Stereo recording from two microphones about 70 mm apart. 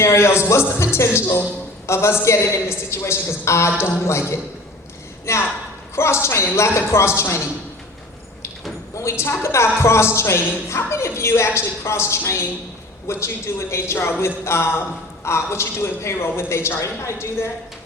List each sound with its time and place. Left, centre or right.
0.0 s a man's voice: left
9.0 s a man's voice: left